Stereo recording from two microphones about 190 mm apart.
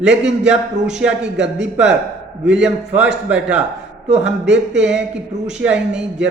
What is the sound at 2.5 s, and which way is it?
Speech, 5° right (ahead or behind).